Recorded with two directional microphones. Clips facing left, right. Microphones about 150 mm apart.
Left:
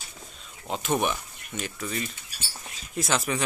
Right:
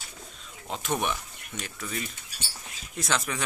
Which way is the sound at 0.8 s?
5° left (ahead or behind).